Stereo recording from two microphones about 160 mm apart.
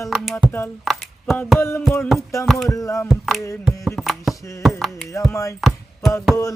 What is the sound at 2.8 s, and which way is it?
Speech, 20° left (ahead or behind).